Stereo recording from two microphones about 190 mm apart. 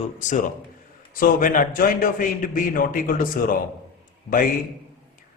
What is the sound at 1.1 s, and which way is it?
A man's voice, 45° left (ahead or behind).